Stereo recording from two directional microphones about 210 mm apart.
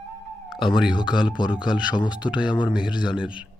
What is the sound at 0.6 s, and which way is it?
Speech, centre (ahead or behind).